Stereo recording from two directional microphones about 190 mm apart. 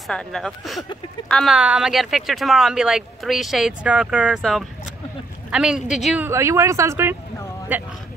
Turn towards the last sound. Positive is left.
turn(degrees=-10)  # may be behind; listen again after turning